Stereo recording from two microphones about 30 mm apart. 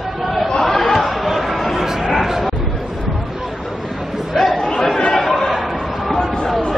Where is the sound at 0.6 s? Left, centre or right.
Centre.